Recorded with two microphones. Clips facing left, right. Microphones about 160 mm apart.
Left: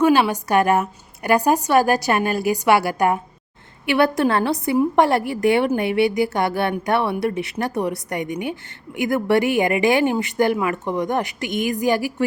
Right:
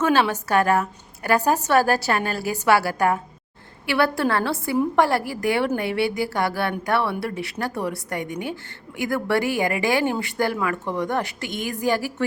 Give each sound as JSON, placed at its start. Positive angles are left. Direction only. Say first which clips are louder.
{"t": 0.0, "sound": "a woman's voice", "louder": "left 4 dB", "side_deg": 15}